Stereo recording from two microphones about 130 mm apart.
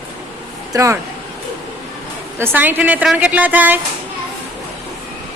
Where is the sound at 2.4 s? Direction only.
15° right (ahead or behind).